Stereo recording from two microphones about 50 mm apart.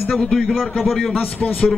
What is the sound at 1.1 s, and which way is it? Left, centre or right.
Speech, left.